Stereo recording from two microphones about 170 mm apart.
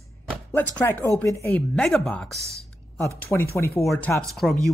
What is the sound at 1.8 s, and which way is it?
Speech, 5° left (ahead or behind).